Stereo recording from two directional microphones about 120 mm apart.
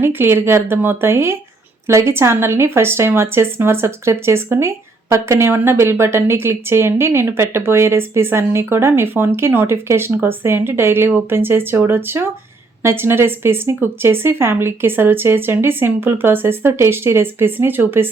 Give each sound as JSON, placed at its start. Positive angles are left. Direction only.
{"t": 0.0, "sound": "speech", "side_deg": -20}